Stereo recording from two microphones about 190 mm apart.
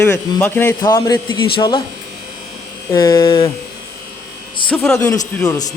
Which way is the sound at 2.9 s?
20° left (ahead or behind).